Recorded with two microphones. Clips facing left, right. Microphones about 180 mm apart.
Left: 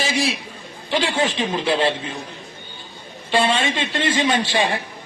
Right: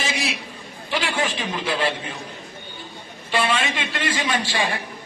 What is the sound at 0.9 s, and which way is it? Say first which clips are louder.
Speech: left 4 dB; 25° left (ahead or behind).